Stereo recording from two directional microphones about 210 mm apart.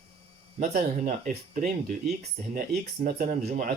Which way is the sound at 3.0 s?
40° right (ahead or behind).